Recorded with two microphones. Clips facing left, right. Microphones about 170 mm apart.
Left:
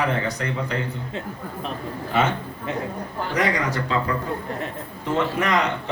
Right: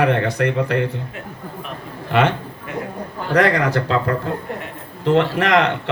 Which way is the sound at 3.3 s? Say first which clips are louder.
Right 7 dB; 70° right (ahead or behind).